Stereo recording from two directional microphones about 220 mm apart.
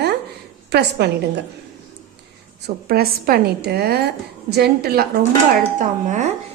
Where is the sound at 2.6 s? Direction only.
45° right (ahead or behind).